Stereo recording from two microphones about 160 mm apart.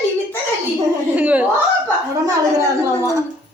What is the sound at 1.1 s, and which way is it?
Speech, 10° right (ahead or behind).